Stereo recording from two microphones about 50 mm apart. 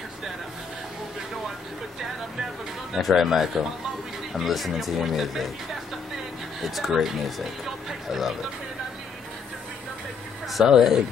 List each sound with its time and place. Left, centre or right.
2.9 s speech: centre
6.6 s speech: centre
10.5 s speech: centre